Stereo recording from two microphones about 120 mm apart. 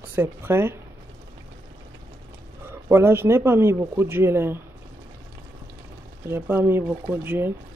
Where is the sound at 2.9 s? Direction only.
20° right (ahead or behind).